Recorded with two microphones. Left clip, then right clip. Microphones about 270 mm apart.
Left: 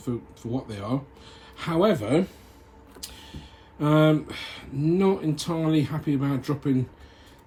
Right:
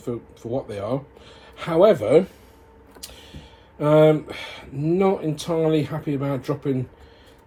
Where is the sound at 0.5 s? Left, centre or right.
Centre.